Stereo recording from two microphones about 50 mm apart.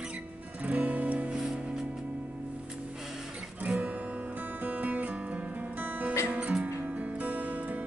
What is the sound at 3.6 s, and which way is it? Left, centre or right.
Guitar, right.